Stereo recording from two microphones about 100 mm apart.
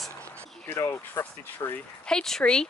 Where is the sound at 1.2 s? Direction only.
25° left (ahead or behind).